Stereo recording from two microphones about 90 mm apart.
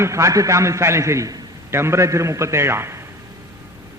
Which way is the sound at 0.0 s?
35° right (ahead or behind).